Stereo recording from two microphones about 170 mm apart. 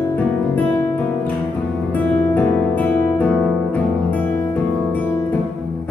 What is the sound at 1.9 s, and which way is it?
Music, 10° left (ahead or behind).